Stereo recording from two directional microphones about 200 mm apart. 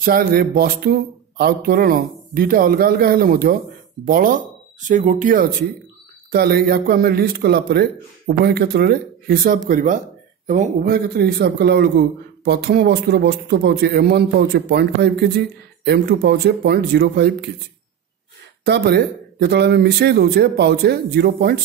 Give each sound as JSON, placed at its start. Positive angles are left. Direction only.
{"t": 0.0, "sound": "a man's voice", "side_deg": -50}
{"t": 18.7, "sound": "a man's voice", "side_deg": -55}